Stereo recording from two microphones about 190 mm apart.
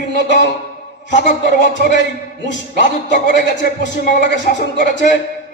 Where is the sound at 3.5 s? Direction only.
40° left (ahead or behind).